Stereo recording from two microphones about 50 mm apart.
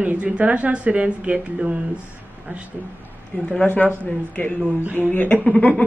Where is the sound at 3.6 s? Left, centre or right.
Left.